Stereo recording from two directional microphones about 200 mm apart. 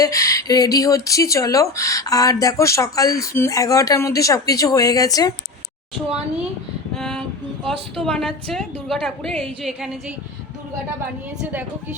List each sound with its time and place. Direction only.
0.0 s speech: 15° left (ahead or behind)
6.9 s a woman's voice: centre (ahead or behind)